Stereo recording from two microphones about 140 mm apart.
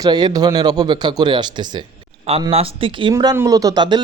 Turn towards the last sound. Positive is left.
turn(degrees=-30)  # may be behind; listen again after turning